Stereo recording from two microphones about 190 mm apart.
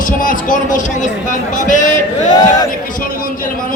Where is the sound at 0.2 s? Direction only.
45° left (ahead or behind).